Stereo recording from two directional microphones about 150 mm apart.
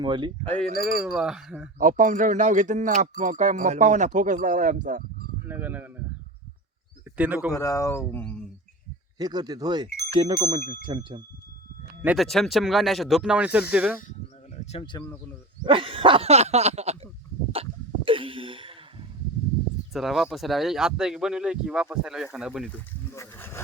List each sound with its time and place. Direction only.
0.0 s speech: 30° right (ahead or behind)
1.0 s speech: 5° right (ahead or behind)
1.8 s speech: 60° right (ahead or behind)
5.5 s speech: 10° right (ahead or behind)
7.2 s speech: 10° right (ahead or behind)
7.5 s speech: 20° left (ahead or behind)
8.2 s speech: 5° left (ahead or behind)
9.1 s speech: 25° right (ahead or behind)
12.0 s speech: centre (ahead or behind)
14.1 s a sound: 50° left (ahead or behind)
15.6 s dog: 35° right (ahead or behind)
17.5 s sneeze: 35° right (ahead or behind)
19.9 s speech: centre (ahead or behind)
23.1 s speech: 15° left (ahead or behind)